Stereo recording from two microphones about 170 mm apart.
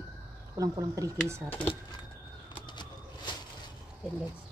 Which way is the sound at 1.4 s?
10° left (ahead or behind).